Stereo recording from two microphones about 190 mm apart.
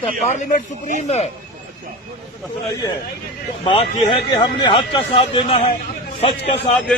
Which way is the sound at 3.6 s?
30° left (ahead or behind).